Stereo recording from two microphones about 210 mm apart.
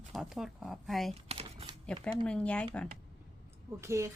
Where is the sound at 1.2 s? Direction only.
25° right (ahead or behind).